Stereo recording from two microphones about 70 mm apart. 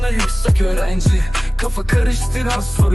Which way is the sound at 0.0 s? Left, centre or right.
Centre.